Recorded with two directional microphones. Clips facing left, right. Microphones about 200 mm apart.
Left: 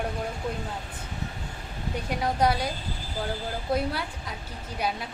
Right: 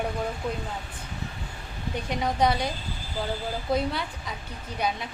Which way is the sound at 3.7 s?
5° left (ahead or behind).